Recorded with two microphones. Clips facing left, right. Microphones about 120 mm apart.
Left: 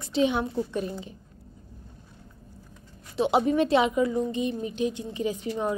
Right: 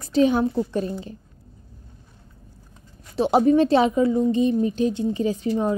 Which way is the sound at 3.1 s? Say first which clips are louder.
Right 5 dB; 40° right (ahead or behind).